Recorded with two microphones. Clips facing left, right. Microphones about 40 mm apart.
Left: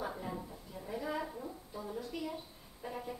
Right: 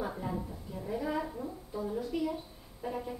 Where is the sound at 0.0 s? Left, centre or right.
Centre.